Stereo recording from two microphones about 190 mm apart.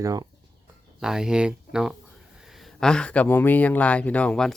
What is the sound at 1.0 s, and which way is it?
Speech, 5° right (ahead or behind).